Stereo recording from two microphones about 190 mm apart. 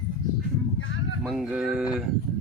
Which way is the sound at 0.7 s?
90° left.